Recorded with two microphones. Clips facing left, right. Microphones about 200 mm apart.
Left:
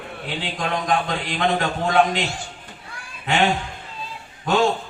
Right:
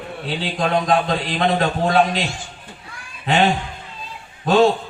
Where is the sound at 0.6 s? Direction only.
30° right (ahead or behind).